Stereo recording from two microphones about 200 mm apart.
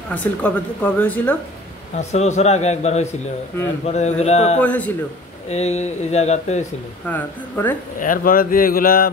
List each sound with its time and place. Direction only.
0.1 s speech: 5° left (ahead or behind)
2.0 s speech: 35° left (ahead or behind)
4.6 s speech: 5° left (ahead or behind)
5.5 s speech: 35° left (ahead or behind)
7.1 s speech: 10° left (ahead or behind)
8.0 s speech: 45° left (ahead or behind)